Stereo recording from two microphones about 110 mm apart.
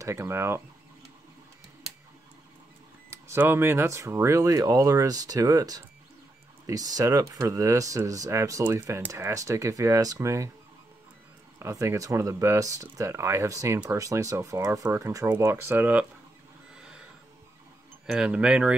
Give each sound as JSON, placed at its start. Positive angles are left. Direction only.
{"t": 0.0, "sound": "speech", "side_deg": -25}
{"t": 3.1, "sound": "speech", "side_deg": -20}
{"t": 11.6, "sound": "speech", "side_deg": -25}
{"t": 16.7, "sound": "a sound", "side_deg": -5}
{"t": 18.0, "sound": "speech", "side_deg": -5}